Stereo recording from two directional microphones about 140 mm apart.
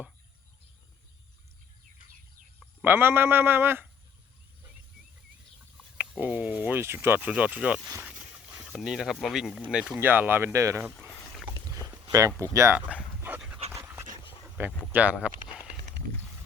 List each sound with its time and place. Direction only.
2.6 s speech: 15° right (ahead or behind)
6.0 s speech: 10° right (ahead or behind)
8.0 s a sound: 5° right (ahead or behind)
9.6 s speech: 5° right (ahead or behind)
12.4 s speech: 20° right (ahead or behind)
13.0 s dog: 10° right (ahead or behind)
14.6 s speech: 15° right (ahead or behind)